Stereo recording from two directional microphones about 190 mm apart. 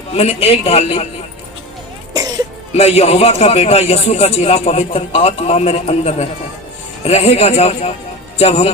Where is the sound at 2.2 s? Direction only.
20° right (ahead or behind).